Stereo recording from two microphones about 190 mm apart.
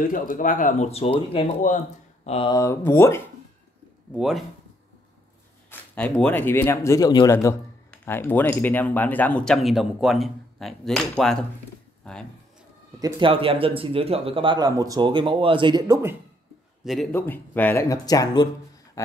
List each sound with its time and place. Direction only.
0.1 s speech: 45° left (ahead or behind)
2.5 s speech: 15° left (ahead or behind)
4.1 s speech: centre (ahead or behind)
5.7 s speech: 10° left (ahead or behind)
13.0 s speech: 25° right (ahead or behind)
16.8 s a man's voice: centre (ahead or behind)
17.1 s speech: 10° left (ahead or behind)